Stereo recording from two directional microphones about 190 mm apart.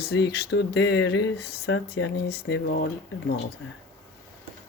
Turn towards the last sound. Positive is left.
turn(degrees=55)  # may be behind; listen again after turning